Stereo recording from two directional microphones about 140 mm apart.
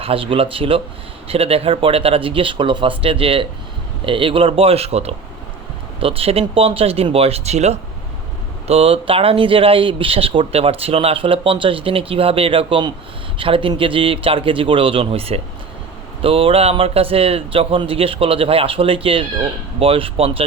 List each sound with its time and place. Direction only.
0.0 s speech: 40° right (ahead or behind)